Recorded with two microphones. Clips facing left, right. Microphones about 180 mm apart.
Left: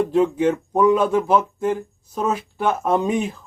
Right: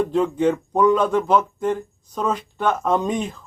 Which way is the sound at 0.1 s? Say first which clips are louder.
Left 1 dB; 5° left (ahead or behind).